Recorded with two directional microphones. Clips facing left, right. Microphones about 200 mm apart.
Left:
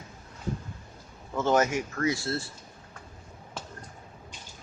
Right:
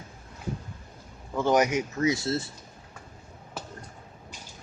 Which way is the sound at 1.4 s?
15° right (ahead or behind).